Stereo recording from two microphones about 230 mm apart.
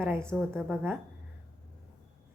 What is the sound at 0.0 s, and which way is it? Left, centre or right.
Speech, centre.